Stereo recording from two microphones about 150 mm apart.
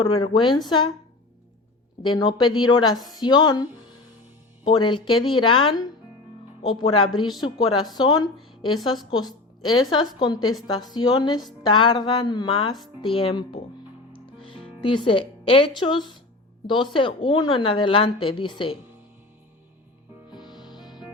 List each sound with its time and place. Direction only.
0.0 s speech: 35° left (ahead or behind)
2.0 s a woman's voice: 30° left (ahead or behind)
14.8 s speech: 35° left (ahead or behind)
20.6 s music: 30° left (ahead or behind)